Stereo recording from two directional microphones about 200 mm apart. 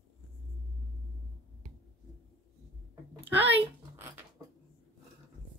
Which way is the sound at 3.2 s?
10° right (ahead or behind).